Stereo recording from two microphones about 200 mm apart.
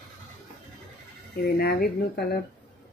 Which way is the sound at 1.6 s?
55° left (ahead or behind).